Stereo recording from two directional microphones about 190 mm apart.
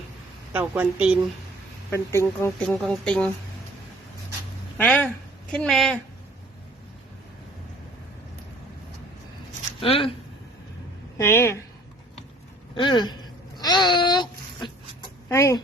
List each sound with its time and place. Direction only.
0.5 s a woman's voice: 10° right (ahead or behind)
1.9 s speech: 15° left (ahead or behind)
2.6 s speech: centre (ahead or behind)
4.8 s speech: 10° left (ahead or behind)
9.8 s speech: 30° left (ahead or behind)
11.2 s speech: 15° left (ahead or behind)
12.7 s speech: 25° left (ahead or behind)
13.6 s a sound: 20° left (ahead or behind)
15.3 s speech: 15° left (ahead or behind)